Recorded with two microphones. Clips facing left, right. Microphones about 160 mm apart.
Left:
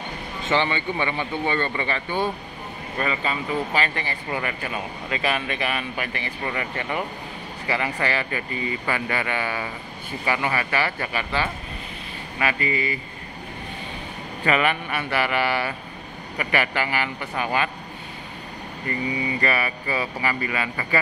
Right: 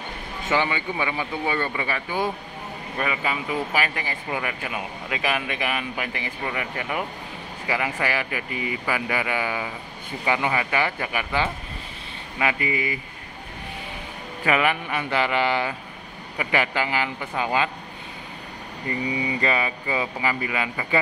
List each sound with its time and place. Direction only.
0.5 s speech: 10° right (ahead or behind)
14.4 s speech: 15° right (ahead or behind)
19.4 s speech: 20° right (ahead or behind)